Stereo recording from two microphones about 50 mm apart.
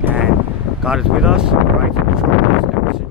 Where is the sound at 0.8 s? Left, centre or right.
Centre.